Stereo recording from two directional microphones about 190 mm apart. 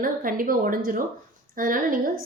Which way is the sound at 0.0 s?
45° right (ahead or behind).